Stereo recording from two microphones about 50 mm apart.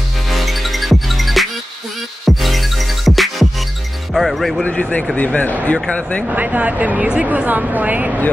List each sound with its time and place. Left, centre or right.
0.3 s music: centre
4.1 s speech: centre
4.6 s speech: left
6.3 s speech: right